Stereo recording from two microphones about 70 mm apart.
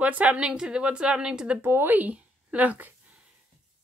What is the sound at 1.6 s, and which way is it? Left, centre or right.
Speech, right.